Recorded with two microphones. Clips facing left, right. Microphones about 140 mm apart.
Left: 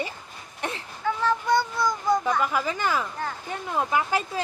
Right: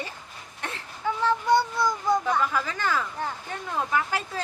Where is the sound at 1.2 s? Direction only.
30° right (ahead or behind).